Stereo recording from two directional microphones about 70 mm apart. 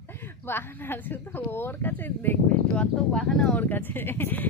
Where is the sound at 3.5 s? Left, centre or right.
Left.